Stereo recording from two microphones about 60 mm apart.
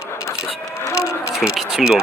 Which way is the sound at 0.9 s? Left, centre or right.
Left.